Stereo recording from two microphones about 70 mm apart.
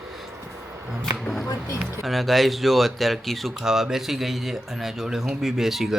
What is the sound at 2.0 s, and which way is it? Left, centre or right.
Speech, centre.